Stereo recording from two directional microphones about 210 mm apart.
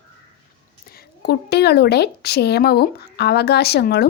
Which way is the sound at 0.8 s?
45° left (ahead or behind).